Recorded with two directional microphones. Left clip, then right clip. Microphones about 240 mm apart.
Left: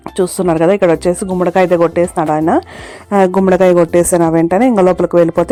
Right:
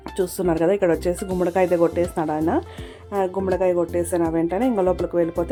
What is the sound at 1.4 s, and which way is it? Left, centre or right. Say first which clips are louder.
A woman's voice: left 8 dB; centre.